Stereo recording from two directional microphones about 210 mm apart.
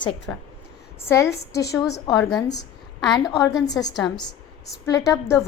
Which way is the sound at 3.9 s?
Centre (ahead or behind).